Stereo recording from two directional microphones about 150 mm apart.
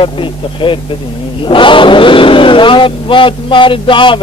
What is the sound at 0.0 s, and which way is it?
Speech, 35° left (ahead or behind).